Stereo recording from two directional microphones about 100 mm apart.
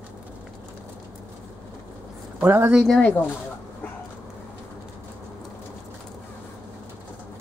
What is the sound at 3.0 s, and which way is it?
Speech, 15° left (ahead or behind).